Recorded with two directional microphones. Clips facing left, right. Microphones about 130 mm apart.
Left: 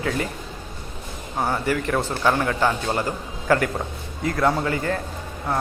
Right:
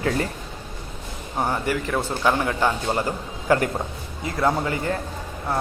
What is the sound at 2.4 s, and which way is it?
A man's voice, 15° right (ahead or behind).